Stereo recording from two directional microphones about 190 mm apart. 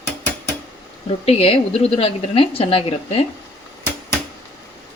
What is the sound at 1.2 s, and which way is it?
A woman's voice, 30° left (ahead or behind).